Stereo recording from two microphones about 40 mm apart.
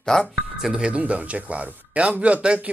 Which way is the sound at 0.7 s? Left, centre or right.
Right.